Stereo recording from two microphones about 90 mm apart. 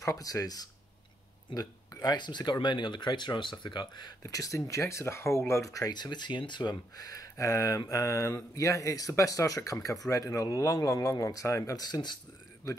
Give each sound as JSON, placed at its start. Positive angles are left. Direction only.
{"t": 0.0, "sound": "speech", "side_deg": 40}
{"t": 5.9, "sound": "speech", "side_deg": 55}